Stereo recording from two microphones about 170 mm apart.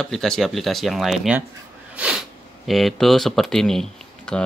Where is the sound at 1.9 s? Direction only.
5° right (ahead or behind).